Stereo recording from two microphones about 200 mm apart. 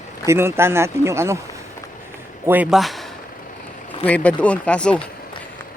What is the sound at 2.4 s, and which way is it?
Speech, 10° right (ahead or behind).